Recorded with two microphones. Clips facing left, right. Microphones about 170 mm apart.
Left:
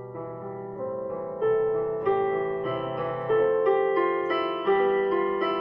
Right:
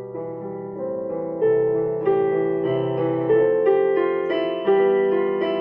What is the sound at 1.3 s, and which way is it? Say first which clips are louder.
Music: right 5 dB; 50° right (ahead or behind).